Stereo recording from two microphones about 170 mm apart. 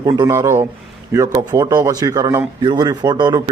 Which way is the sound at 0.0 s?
20° right (ahead or behind).